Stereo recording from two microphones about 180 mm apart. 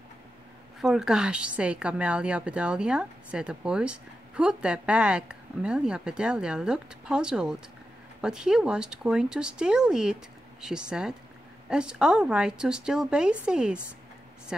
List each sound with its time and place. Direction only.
0.7 s speech: 5° right (ahead or behind)